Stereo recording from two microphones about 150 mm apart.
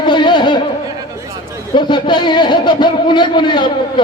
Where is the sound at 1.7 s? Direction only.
30° left (ahead or behind).